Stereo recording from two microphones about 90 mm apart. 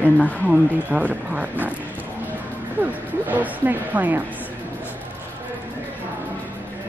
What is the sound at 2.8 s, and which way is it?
Speech, 20° right (ahead or behind).